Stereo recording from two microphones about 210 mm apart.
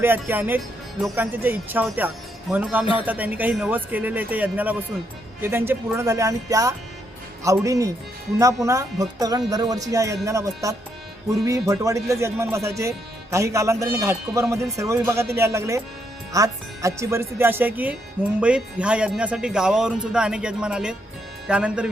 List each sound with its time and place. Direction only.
0.0 s speech: 10° right (ahead or behind)